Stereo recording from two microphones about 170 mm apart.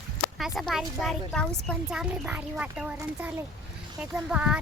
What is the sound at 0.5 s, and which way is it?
A child's voice, centre (ahead or behind).